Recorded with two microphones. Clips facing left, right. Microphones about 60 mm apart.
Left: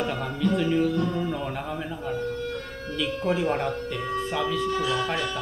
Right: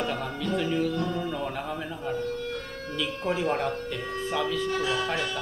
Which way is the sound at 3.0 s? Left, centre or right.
Centre.